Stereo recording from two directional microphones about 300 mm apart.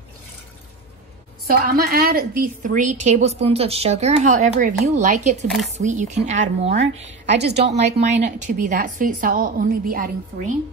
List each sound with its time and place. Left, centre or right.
1.5 s a woman's voice: right
7.3 s a woman's voice: right
8.0 s a woman's voice: right